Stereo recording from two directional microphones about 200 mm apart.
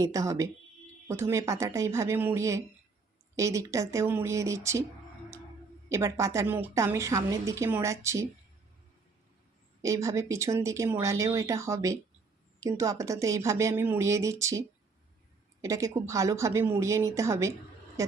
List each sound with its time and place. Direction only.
0.0 s a woman's voice: 15° right (ahead or behind)
5.9 s a woman's voice: 15° right (ahead or behind)
9.8 s a woman's voice: 15° right (ahead or behind)
15.6 s a woman's voice: 15° right (ahead or behind)